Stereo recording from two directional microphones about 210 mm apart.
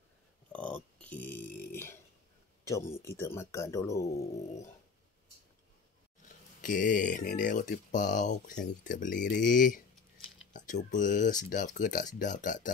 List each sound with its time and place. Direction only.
0.5 s a sound: 5° left (ahead or behind)
2.7 s speech: 15° left (ahead or behind)
6.2 s speech: 40° left (ahead or behind)